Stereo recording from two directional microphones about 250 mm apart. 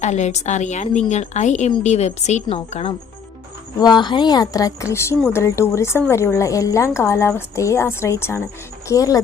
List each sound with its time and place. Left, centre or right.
0.0 s a woman's voice: left